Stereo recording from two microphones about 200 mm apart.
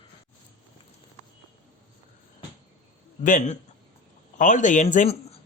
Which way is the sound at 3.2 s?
40° left (ahead or behind).